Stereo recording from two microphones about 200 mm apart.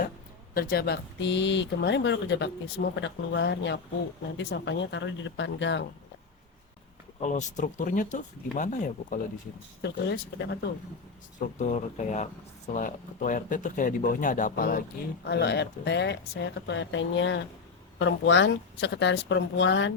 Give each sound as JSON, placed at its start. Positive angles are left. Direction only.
{"t": 0.5, "sound": "speech", "side_deg": 45}
{"t": 7.2, "sound": "speech", "side_deg": 35}
{"t": 10.1, "sound": "speech", "side_deg": 55}
{"t": 11.3, "sound": "speech", "side_deg": 40}
{"t": 15.3, "sound": "speech", "side_deg": 55}